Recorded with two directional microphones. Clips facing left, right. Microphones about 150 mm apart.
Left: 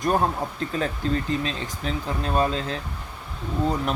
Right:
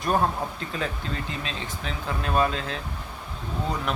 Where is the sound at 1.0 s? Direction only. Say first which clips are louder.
Left 8 dB; 35° left (ahead or behind).